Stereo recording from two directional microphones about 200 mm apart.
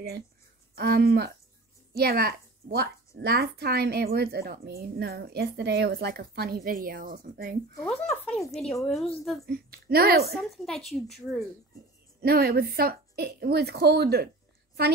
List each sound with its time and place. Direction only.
0.7 s a woman's voice: 50° right (ahead or behind)
7.8 s a woman's voice: 5° left (ahead or behind)
9.5 s a woman's voice: 50° right (ahead or behind)
10.3 s a woman's voice: centre (ahead or behind)
12.2 s a woman's voice: 50° right (ahead or behind)